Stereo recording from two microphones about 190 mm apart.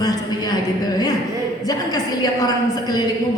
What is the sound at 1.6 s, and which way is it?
Speech, 20° left (ahead or behind).